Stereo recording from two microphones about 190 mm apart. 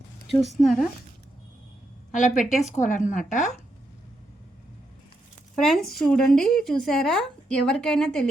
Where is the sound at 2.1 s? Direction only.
40° left (ahead or behind).